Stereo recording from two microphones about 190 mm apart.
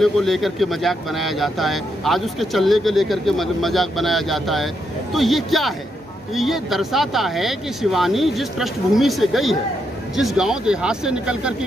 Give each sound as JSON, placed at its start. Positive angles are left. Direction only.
{"t": 0.0, "sound": "speech", "side_deg": 0}